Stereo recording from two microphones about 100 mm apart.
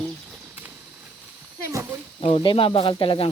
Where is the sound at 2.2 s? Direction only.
65° left (ahead or behind).